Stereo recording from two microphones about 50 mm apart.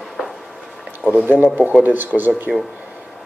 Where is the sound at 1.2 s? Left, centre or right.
Right.